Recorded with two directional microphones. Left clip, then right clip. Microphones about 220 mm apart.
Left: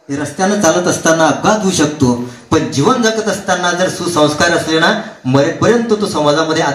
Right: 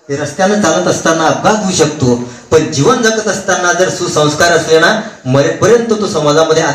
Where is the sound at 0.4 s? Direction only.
50° left (ahead or behind).